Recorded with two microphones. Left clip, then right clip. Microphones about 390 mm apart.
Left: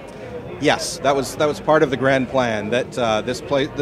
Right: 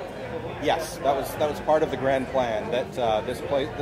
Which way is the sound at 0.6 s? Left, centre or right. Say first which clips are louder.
Left 6 dB; left.